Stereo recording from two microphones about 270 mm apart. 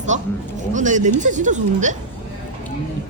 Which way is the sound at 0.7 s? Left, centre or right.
Right.